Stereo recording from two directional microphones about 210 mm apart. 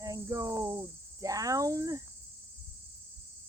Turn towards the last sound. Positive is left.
turn(degrees=-15)  # may be behind; listen again after turning